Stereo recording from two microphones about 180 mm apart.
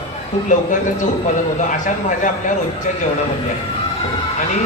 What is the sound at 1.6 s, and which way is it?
Speech, 45° left (ahead or behind).